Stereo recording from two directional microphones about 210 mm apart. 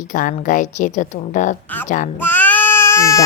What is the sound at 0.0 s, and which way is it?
Speech, 40° left (ahead or behind).